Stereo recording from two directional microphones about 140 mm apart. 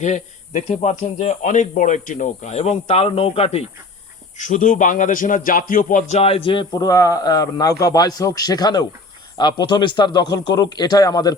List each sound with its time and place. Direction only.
0.0 s speech: 55° left (ahead or behind)
4.4 s a man's voice: 65° left (ahead or behind); by 6.8 s 35° left (ahead or behind)
6.8 s a man's voice: 25° left (ahead or behind)